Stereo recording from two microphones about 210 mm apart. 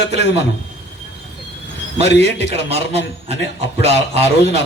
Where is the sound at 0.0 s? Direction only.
55° left (ahead or behind).